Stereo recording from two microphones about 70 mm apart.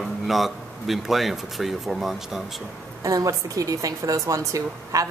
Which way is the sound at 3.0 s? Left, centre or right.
Right.